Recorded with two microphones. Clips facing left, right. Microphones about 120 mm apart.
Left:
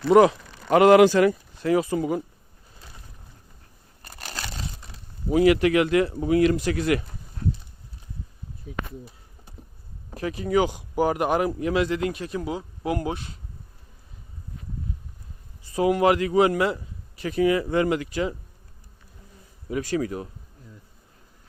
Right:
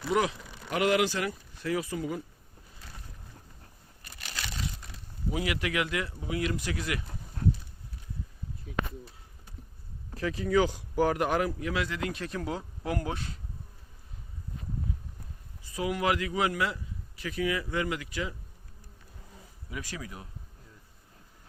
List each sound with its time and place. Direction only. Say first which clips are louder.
0.1 s a man's voice: left 12 dB; 40° left (ahead or behind)
0.7 s a man's voice: left 12 dB; 90° left
1.7 s speech: left 10 dB; 25° left (ahead or behind)
2.0 s a man's voice: left 8 dB; 40° left (ahead or behind)
4.0 s crumpling: left 5 dB; 40° left (ahead or behind)
5.3 s a man's voice: left 13 dB; 45° left (ahead or behind)
6.2 s speech: left 11 dB; 50° left (ahead or behind)
6.6 s speech: left 11 dB; 60° left (ahead or behind)
10.4 s speech: left 3 dB; 20° left (ahead or behind)
12.1 s speech: left 4 dB; 15° left (ahead or behind)
15.7 s a man's voice: left 9 dB; 35° left (ahead or behind)
20.0 s speech: left 15 dB; 50° left (ahead or behind)